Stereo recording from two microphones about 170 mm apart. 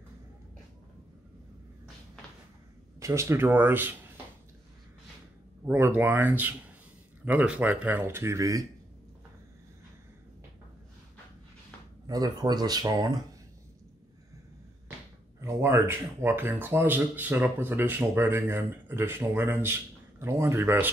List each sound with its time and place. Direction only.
3.0 s speech: 15° right (ahead or behind)
5.7 s speech: 10° right (ahead or behind)
12.1 s speech: 20° right (ahead or behind)
15.4 s speech: 15° right (ahead or behind)